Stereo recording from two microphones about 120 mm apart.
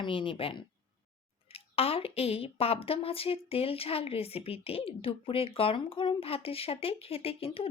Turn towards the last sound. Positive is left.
turn(degrees=50)  # may be behind; listen again after turning